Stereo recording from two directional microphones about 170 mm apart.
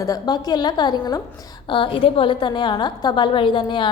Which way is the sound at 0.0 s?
20° left (ahead or behind).